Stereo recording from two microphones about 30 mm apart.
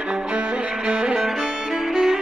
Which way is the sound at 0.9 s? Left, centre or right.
Right.